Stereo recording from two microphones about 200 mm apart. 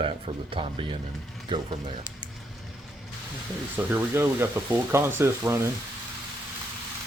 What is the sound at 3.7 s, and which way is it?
Speech, 10° right (ahead or behind).